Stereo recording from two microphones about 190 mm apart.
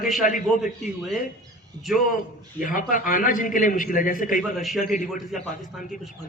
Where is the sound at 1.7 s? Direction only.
20° right (ahead or behind).